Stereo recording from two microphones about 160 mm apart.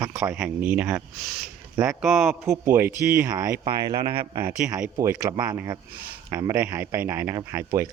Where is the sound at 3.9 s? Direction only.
35° right (ahead or behind).